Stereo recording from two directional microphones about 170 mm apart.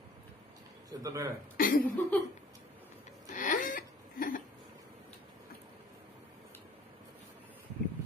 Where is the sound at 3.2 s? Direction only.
50° left (ahead or behind).